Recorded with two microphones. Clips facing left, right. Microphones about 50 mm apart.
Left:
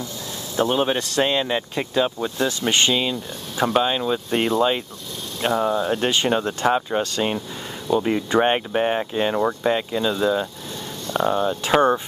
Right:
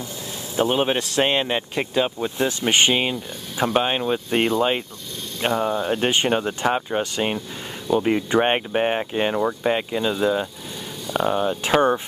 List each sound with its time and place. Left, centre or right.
0.6 s speech: centre
3.5 s speech: centre
9.3 s speech: centre
9.7 s speech: centre